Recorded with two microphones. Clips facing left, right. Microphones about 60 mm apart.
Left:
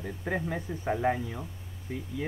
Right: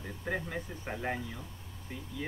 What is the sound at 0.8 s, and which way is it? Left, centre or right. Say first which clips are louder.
Speech: left 10 dB; left.